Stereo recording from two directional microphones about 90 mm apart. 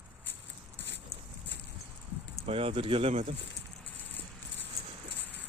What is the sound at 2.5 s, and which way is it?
Speech, 90° right.